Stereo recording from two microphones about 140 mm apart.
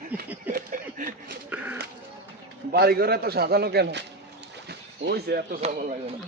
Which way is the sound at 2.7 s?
90° right.